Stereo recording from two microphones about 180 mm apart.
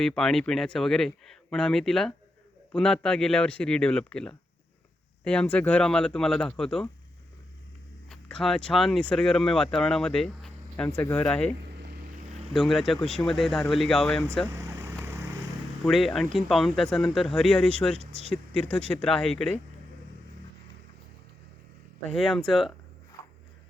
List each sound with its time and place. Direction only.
0.0 s speech: 5° left (ahead or behind)
8.1 s speech: 5° left (ahead or behind)
12.5 s speech: centre (ahead or behind)
14.5 s vehicle: 15° right (ahead or behind)
15.8 s speech: centre (ahead or behind)
17.9 s speech: 35° right (ahead or behind)
18.9 s speech: 5° left (ahead or behind)
22.1 s speech: centre (ahead or behind)